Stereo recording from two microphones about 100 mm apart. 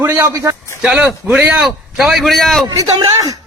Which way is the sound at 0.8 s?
10° right (ahead or behind).